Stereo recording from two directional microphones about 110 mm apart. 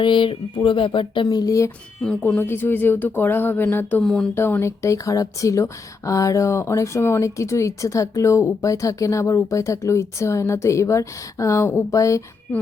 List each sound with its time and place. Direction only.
0.0 s speech: 45° left (ahead or behind); by 1.7 s 30° left (ahead or behind)
2.2 s speech: 20° left (ahead or behind)
4.0 s speech: 5° left (ahead or behind)
4.4 s speech: 20° left (ahead or behind)